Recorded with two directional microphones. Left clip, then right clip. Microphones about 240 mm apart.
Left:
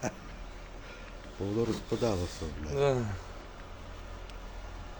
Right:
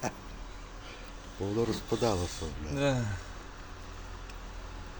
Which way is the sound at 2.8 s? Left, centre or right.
Left.